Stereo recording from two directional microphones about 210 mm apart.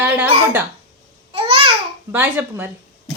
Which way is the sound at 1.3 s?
25° right (ahead or behind).